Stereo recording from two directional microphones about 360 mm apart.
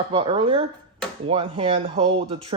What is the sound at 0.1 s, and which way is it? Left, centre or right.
Speech, centre.